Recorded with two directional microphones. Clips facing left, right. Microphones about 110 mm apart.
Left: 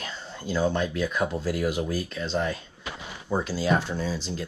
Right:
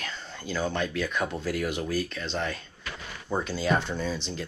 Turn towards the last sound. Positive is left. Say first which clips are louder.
# left 1 dB
turn(degrees=5)  # may be behind; listen again after turning